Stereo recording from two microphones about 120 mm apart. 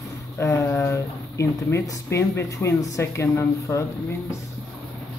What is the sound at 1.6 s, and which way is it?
Speech, 25° left (ahead or behind).